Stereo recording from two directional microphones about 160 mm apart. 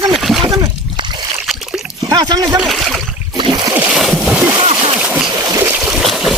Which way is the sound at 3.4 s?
30° right (ahead or behind).